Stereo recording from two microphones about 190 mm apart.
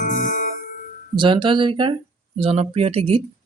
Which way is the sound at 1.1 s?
25° right (ahead or behind).